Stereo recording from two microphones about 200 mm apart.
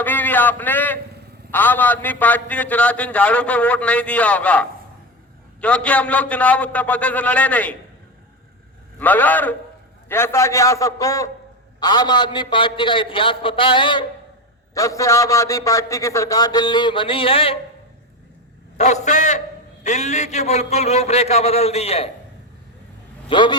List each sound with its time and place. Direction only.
0.0 s a sound: 10° left (ahead or behind)
1.5 s a man's voice: 10° left (ahead or behind)
9.0 s a man's voice: 10° left (ahead or behind); by 17.6 s 30° left (ahead or behind)
18.8 s a man's voice: 35° left (ahead or behind)
23.3 s a man's voice: 25° left (ahead or behind)